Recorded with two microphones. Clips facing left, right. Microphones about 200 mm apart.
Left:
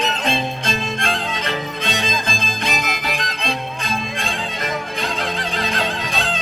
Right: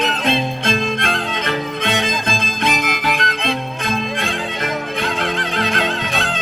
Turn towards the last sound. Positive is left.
turn(degrees=-55)  # may be behind; listen again after turning